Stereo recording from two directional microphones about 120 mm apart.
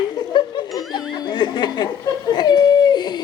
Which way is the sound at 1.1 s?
40° left (ahead or behind).